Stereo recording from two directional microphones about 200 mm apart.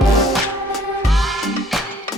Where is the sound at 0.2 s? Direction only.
Centre (ahead or behind).